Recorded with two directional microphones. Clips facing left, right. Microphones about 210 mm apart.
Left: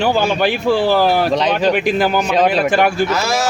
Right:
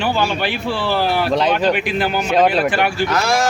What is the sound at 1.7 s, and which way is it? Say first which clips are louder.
Speech: left 3 dB; 45° left (ahead or behind).